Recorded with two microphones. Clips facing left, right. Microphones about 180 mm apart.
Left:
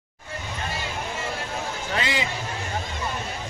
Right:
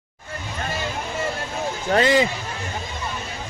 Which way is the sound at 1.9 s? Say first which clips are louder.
Right 11 dB; 45° right (ahead or behind).